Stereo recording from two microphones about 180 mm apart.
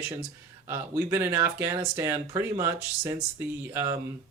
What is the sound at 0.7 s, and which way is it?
Speech, 15° right (ahead or behind).